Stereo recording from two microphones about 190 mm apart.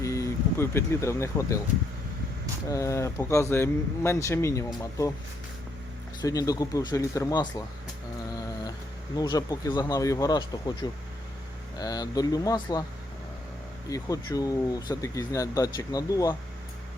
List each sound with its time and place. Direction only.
0.0 s speech: 15° left (ahead or behind)
2.6 s speech: 15° left (ahead or behind)
6.2 s speech: 20° left (ahead or behind)
9.1 s speech: 20° left (ahead or behind)
13.9 s speech: 20° left (ahead or behind)